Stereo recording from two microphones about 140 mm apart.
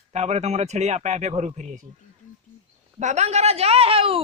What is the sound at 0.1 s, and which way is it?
Speech, 55° right (ahead or behind).